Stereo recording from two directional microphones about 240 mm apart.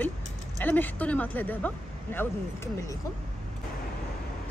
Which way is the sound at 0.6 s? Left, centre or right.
Centre.